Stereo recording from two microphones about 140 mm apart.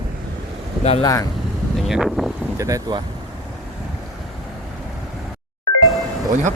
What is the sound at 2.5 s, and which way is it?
Speech, 25° right (ahead or behind).